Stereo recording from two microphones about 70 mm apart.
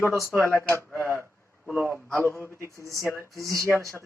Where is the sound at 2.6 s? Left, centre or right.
Right.